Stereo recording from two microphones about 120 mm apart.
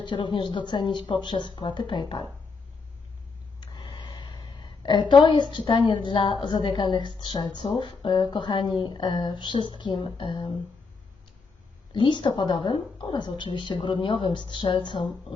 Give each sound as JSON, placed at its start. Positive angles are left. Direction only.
{"t": 0.0, "sound": "speech", "side_deg": 40}
{"t": 3.6, "sound": "a woman's voice", "side_deg": 40}
{"t": 11.9, "sound": "speech", "side_deg": 40}